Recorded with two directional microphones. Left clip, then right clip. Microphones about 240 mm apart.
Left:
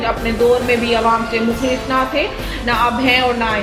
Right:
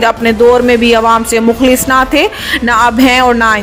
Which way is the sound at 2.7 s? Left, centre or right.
Right.